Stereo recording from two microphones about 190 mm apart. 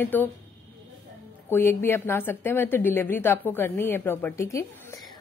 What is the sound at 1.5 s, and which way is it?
Speech, 10° left (ahead or behind).